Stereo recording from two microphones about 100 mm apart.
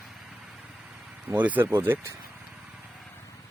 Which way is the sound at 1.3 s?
15° right (ahead or behind).